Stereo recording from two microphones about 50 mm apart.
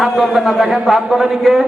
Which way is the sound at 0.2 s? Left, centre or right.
Centre.